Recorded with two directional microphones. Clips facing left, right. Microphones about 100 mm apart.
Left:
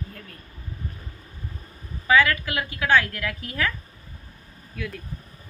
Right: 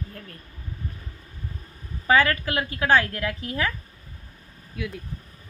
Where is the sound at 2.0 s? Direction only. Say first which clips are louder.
Even; 35° right (ahead or behind).